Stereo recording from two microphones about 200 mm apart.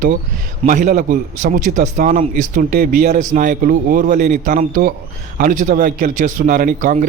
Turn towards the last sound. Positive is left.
turn(degrees=-40)  # may be behind; listen again after turning